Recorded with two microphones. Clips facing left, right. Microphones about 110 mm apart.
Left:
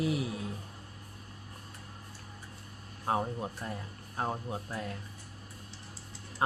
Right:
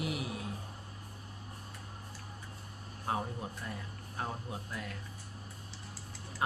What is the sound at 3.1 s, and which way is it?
Speech, 30° left (ahead or behind).